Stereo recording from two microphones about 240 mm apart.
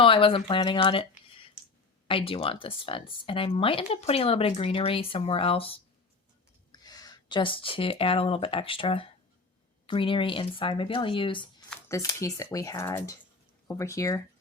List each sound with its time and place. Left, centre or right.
0.0 s speech: left